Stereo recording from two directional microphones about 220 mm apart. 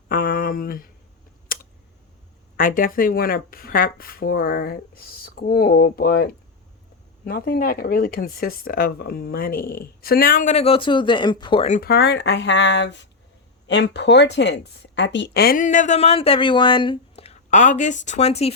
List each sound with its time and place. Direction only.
0.1 s speech: 40° left (ahead or behind)
2.6 s speech: 40° left (ahead or behind)
11.8 s speech: 45° left (ahead or behind); by 18.5 s 30° left (ahead or behind)